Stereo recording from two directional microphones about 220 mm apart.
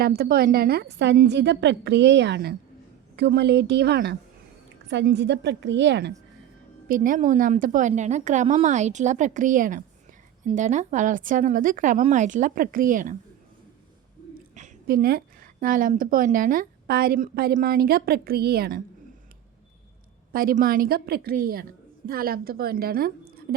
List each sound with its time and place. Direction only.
0.0 s a woman's voice: 45° right (ahead or behind)
6.8 s a woman's voice: 40° right (ahead or behind)
14.5 s a woman's voice: 35° right (ahead or behind)
20.3 s a woman's voice: 40° right (ahead or behind)